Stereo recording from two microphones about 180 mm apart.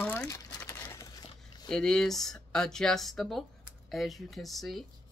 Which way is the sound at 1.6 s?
5° left (ahead or behind).